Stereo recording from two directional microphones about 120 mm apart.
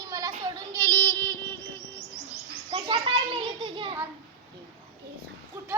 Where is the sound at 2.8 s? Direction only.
45° right (ahead or behind).